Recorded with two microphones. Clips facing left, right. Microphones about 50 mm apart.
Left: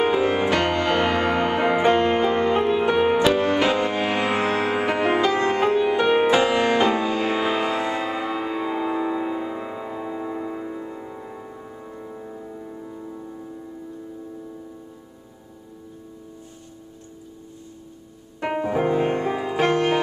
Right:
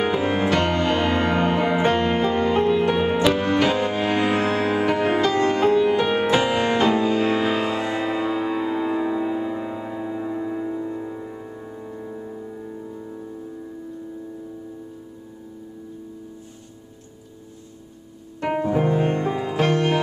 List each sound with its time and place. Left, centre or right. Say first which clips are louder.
0.3 s music: even; centre
1.6 s music: left 1 dB; left
1.9 s music: left 2 dB; centre
18.6 s music: even; centre